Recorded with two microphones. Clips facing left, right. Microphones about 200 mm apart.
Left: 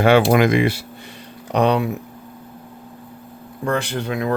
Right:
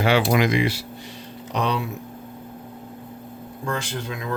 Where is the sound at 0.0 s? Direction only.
55° left (ahead or behind).